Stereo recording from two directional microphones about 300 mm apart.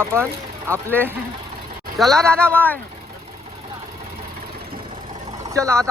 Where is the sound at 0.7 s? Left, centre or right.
Centre.